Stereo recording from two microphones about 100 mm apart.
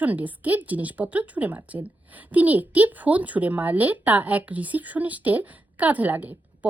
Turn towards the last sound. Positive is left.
turn(degrees=-15)  # may be behind; listen again after turning